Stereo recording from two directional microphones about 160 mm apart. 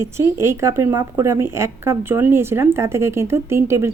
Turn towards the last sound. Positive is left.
turn(degrees=-15)  # may be behind; listen again after turning